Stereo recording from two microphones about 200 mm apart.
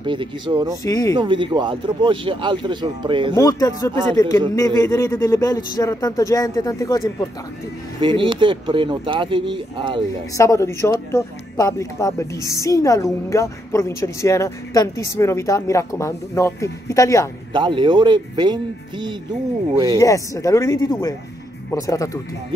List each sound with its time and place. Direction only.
0.0 s speech: 25° right (ahead or behind)
0.8 s a man's voice: 20° left (ahead or behind)
1.1 s speech: 25° right (ahead or behind)
3.3 s a man's voice: 15° left (ahead or behind)
8.0 s speech: 25° right (ahead or behind)
10.3 s a man's voice: 15° left (ahead or behind)
17.5 s speech: 25° right (ahead or behind)
20.0 s a man's voice: 15° left (ahead or behind)